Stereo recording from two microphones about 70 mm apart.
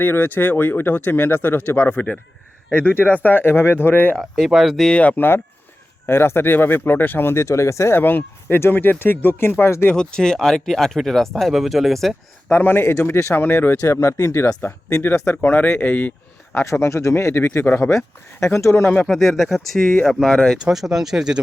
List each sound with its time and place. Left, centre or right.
0.0 s speech: left
4.2 s speech: centre
4.9 s speech: left
7.9 s speech: left
9.9 s speech: centre
12.5 s speech: left
13.8 s speech: left
16.6 s speech: left
19.0 s speech: centre